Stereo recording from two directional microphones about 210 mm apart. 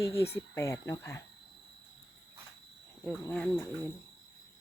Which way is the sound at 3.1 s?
5° left (ahead or behind).